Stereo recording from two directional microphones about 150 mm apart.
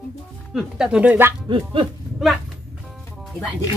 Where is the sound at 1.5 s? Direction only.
35° right (ahead or behind).